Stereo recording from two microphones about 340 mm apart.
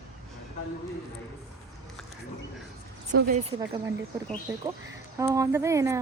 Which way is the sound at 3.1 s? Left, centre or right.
Right.